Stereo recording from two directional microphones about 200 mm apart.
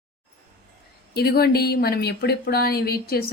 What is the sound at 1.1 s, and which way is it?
Speech, 50° left (ahead or behind).